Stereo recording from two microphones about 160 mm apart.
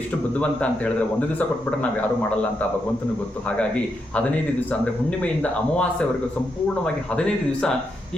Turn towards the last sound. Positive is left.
turn(degrees=5)  # may be behind; listen again after turning